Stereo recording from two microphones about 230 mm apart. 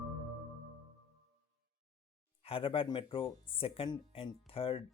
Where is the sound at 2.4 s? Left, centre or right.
Left.